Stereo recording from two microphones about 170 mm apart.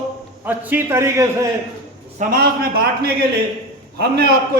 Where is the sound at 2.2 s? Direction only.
60° right (ahead or behind).